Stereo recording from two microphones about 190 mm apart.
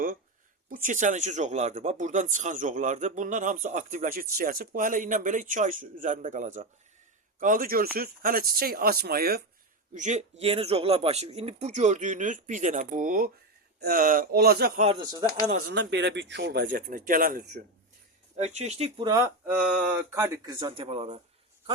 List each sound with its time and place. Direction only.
0.7 s speech: 45° right (ahead or behind)
9.9 s speech: 40° right (ahead or behind); by 14.8 s 55° right (ahead or behind)
14.8 s speech: 30° right (ahead or behind)
15.0 s speech: 20° right (ahead or behind)
15.5 s speech: 70° right (ahead or behind); by 17.6 s 50° right (ahead or behind)
18.3 s speech: 35° right (ahead or behind)
19.2 s mantra: 5° right (ahead or behind)
20.1 s speech: 20° right (ahead or behind)